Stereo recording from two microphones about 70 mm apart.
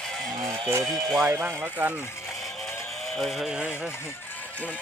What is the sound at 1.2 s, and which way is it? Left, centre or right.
Speech, right.